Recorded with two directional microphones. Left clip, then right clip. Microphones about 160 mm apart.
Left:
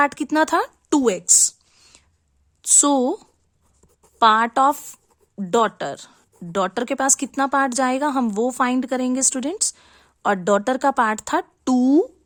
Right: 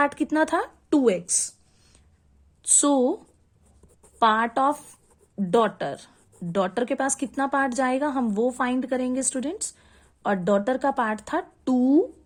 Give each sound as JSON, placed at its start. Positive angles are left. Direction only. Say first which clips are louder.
{"t": 0.0, "sound": "a woman's voice", "louder": "left 4 dB", "side_deg": 30}